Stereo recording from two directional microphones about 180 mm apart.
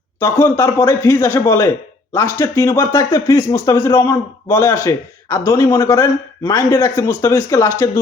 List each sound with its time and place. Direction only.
0.2 s speech: 15° left (ahead or behind)